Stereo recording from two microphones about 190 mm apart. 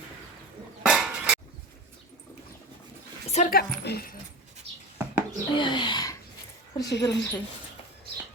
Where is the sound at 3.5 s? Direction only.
55° left (ahead or behind).